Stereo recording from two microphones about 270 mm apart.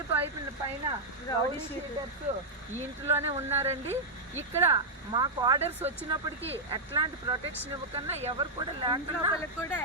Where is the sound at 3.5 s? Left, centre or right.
Centre.